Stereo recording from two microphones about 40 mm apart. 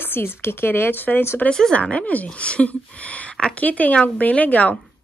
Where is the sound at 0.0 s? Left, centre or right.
Left.